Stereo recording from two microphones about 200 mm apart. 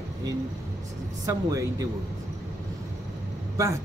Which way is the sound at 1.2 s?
15° right (ahead or behind).